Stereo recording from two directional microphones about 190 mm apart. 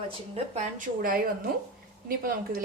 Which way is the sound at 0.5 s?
45° right (ahead or behind).